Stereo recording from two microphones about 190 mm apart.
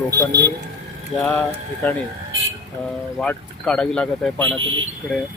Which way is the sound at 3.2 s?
5° left (ahead or behind).